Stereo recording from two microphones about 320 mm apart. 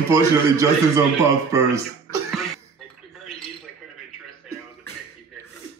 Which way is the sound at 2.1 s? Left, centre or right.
Centre.